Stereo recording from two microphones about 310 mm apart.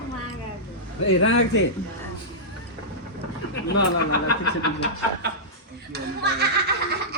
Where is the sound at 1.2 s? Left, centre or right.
Left.